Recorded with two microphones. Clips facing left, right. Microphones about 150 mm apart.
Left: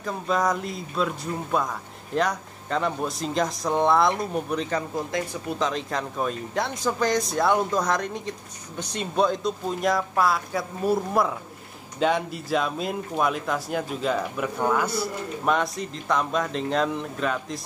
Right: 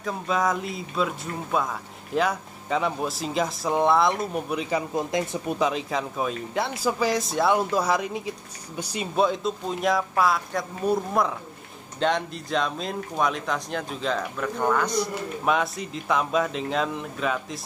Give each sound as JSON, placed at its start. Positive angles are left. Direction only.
{"t": 0.0, "sound": "speech", "side_deg": 0}
{"t": 4.9, "sound": "speech", "side_deg": -20}
{"t": 5.7, "sound": "speech", "side_deg": -5}